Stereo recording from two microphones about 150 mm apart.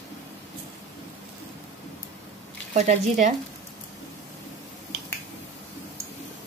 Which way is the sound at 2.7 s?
55° right (ahead or behind).